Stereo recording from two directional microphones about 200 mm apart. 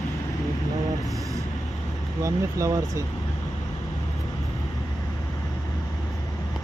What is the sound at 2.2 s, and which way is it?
Speech, 15° right (ahead or behind).